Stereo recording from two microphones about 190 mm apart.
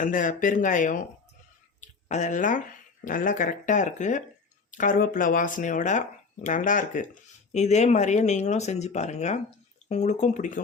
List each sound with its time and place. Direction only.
0.0 s speech: 45° left (ahead or behind)